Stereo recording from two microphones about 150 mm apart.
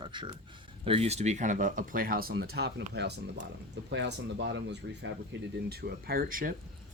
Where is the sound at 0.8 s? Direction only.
40° right (ahead or behind); by 3.0 s 90° right.